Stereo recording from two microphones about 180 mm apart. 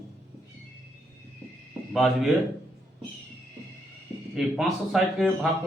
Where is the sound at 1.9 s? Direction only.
Centre (ahead or behind).